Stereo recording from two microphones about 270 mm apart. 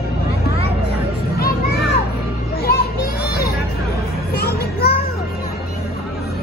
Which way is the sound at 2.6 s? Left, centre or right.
Left.